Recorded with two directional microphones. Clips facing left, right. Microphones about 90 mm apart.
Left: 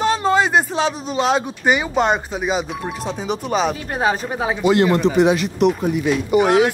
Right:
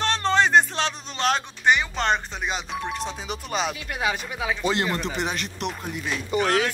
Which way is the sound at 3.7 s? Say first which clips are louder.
Left 7 dB; 40° left (ahead or behind).